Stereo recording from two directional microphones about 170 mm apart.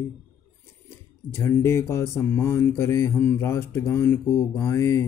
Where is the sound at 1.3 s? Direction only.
15° left (ahead or behind).